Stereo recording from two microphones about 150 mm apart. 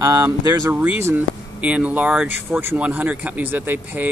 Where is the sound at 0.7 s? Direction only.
10° right (ahead or behind).